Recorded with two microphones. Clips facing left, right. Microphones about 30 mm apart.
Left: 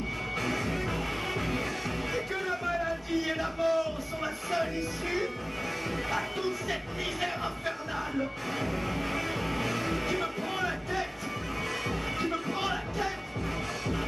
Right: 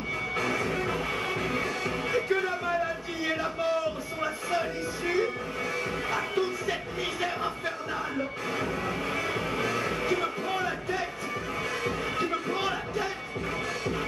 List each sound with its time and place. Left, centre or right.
0.4 s music: centre
3.3 s a sound: centre
4.2 s music: centre
12.2 s music: centre